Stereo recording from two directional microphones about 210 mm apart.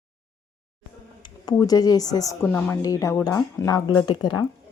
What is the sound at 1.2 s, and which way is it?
Speech, 20° left (ahead or behind).